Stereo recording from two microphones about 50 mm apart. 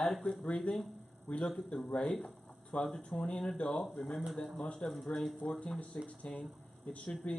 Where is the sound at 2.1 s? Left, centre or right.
Left.